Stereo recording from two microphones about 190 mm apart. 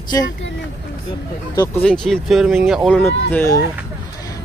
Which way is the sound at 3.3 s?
15° left (ahead or behind).